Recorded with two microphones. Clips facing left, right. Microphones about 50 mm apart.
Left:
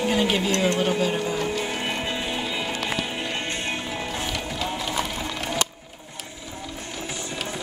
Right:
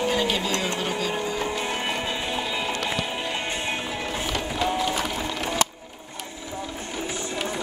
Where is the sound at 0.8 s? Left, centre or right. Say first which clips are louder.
Left 4 dB; centre.